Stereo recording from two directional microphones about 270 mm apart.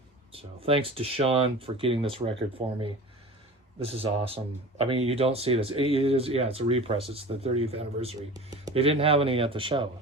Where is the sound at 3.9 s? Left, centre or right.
Right.